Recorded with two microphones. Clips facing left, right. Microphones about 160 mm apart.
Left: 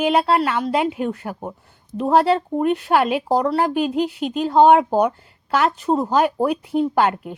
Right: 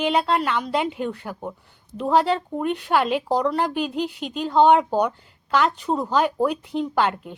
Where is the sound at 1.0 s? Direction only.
45° left (ahead or behind).